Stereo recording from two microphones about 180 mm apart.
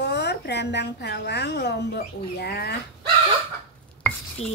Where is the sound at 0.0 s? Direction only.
70° left (ahead or behind).